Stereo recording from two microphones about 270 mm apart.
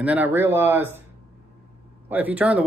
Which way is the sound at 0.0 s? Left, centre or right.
Centre.